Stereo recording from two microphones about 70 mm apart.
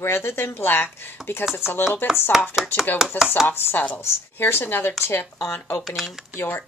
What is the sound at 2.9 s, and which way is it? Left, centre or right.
Chopping, centre.